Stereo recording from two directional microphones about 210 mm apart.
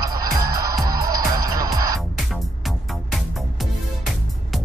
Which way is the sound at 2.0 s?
Centre (ahead or behind).